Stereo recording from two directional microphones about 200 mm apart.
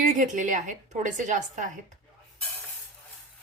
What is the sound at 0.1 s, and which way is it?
Speech, 40° right (ahead or behind).